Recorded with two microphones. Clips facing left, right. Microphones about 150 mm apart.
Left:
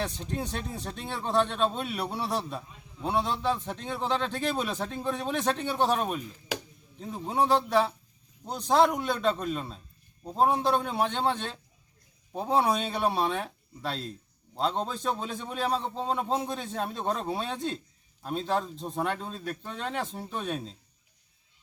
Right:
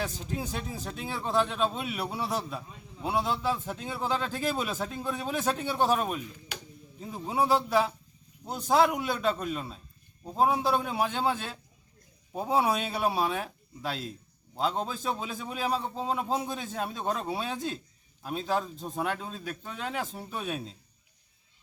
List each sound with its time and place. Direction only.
0.0 s a man's voice: 5° right (ahead or behind)
6.5 s a sound: 90° left
7.0 s a man's voice: 5° right (ahead or behind)